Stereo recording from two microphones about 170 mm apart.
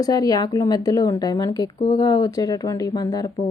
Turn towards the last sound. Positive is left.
turn(degrees=20)  # may be behind; listen again after turning